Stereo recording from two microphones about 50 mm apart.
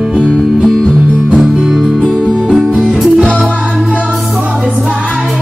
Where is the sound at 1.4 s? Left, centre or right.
Centre.